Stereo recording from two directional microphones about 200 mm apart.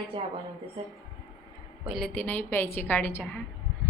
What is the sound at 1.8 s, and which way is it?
A woman's voice, centre (ahead or behind).